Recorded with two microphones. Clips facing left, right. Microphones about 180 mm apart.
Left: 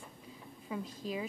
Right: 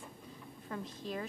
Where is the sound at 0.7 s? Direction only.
5° left (ahead or behind).